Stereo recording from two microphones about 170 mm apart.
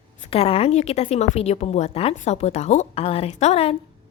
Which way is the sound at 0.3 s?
35° left (ahead or behind).